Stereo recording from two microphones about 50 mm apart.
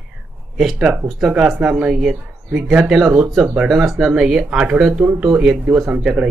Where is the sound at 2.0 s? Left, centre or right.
Centre.